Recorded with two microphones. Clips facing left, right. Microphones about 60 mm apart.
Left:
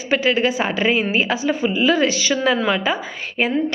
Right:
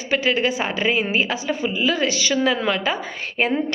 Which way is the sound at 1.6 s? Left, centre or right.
Centre.